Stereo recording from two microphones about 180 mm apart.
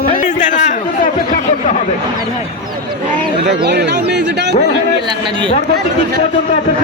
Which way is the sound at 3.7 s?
65° right (ahead or behind).